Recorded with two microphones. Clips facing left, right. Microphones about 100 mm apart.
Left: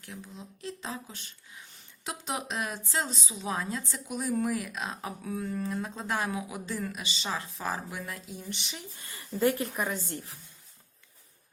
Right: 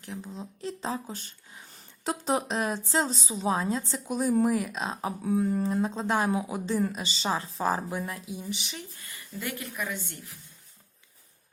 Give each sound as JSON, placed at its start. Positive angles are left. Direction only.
{"t": 0.0, "sound": "a woman's voice", "side_deg": -30}
{"t": 9.0, "sound": "speech", "side_deg": 30}